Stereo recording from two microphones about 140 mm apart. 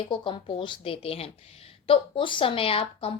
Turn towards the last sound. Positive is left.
turn(degrees=40)  # may be behind; listen again after turning